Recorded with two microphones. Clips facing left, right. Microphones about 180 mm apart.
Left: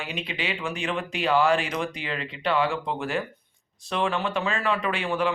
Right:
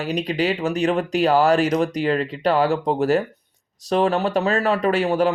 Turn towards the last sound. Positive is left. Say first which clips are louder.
# right 8 dB
turn(degrees=-40)  # may be behind; listen again after turning